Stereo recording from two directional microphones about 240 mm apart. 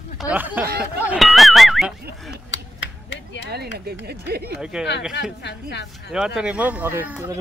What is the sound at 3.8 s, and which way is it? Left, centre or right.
Speech, right.